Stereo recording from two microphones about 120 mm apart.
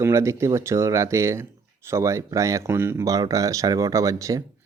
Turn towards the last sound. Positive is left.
turn(degrees=-25)  # may be behind; listen again after turning